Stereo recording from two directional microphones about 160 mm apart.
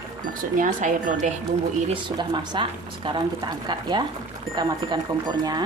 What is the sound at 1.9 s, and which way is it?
Speech, 30° right (ahead or behind).